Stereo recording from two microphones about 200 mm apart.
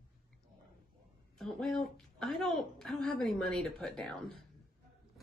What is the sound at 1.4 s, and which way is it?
Speech, centre (ahead or behind).